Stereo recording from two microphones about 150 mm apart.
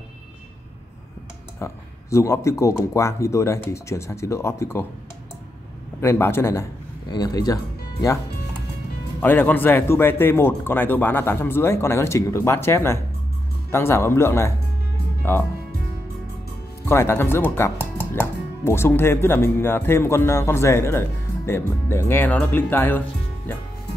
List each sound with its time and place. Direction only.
1.6 s speech: 20° left (ahead or behind)
5.9 s speech: 15° left (ahead or behind)
9.2 s speech: 15° left (ahead or behind)
16.8 s speech: 15° left (ahead or behind)